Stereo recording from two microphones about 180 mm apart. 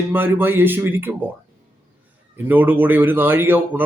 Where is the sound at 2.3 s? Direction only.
10° right (ahead or behind).